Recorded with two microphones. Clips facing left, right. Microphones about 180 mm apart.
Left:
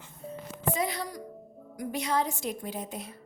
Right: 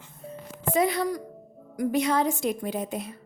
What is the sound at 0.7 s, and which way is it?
A woman's voice, 60° right (ahead or behind).